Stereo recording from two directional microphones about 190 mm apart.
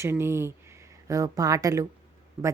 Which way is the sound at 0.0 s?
15° right (ahead or behind).